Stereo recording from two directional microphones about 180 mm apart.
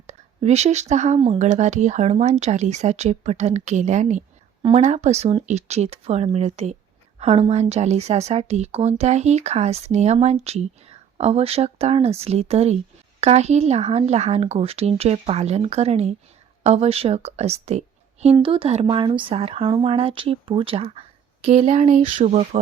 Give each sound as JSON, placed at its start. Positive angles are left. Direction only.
{"t": 0.1, "sound": "a woman's voice", "side_deg": -40}